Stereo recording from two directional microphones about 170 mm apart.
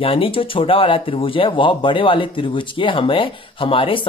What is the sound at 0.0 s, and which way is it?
Speech, 30° left (ahead or behind).